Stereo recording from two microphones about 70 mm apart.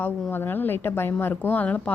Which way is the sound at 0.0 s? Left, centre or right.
Left.